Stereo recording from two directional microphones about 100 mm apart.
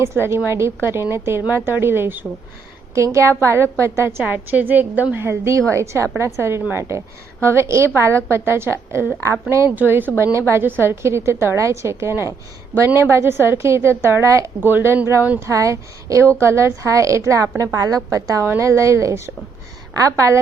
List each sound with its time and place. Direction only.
0.0 s a woman's voice: 25° right (ahead or behind)
15.4 s a woman's voice: 30° right (ahead or behind)